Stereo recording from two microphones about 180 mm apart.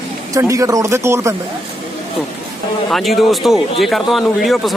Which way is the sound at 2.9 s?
Centre (ahead or behind).